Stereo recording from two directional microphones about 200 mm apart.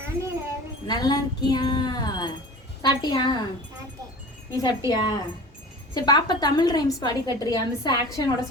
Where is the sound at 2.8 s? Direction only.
20° left (ahead or behind).